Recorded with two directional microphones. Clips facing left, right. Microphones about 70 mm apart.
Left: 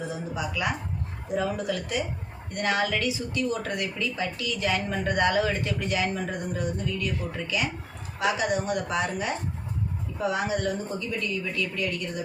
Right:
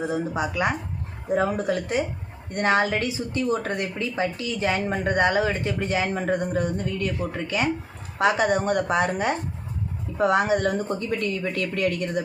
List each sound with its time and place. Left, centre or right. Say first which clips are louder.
0.0 s a woman's voice: right 6 dB; right